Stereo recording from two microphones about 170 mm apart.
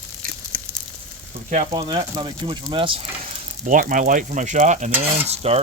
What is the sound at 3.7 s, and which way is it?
Speech, 50° right (ahead or behind).